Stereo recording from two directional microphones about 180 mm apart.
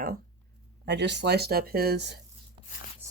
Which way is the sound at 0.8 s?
75° right (ahead or behind).